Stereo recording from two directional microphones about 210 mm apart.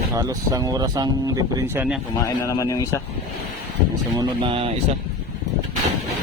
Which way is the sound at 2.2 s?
15° left (ahead or behind).